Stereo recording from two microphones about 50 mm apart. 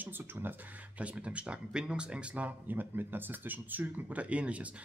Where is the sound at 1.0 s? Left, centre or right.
Right.